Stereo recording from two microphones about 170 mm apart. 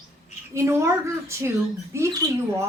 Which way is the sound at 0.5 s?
15° right (ahead or behind).